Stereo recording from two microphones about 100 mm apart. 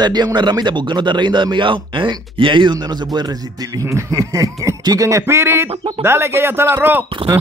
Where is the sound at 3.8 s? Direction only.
30° right (ahead or behind).